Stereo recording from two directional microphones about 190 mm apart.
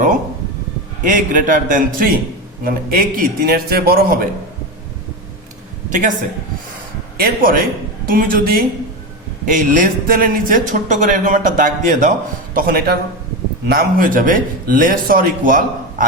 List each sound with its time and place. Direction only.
1.0 s speech: 45° right (ahead or behind)
5.9 s speech: 40° right (ahead or behind)
7.2 s speech: 50° right (ahead or behind)